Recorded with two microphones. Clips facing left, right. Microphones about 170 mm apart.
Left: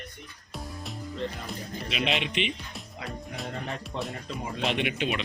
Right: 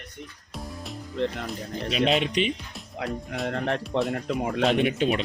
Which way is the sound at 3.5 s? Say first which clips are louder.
Right 10 dB; 70° right (ahead or behind).